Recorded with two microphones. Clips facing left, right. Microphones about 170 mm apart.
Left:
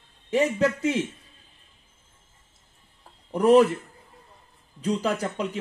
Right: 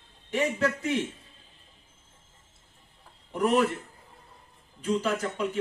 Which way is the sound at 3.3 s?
40° left (ahead or behind).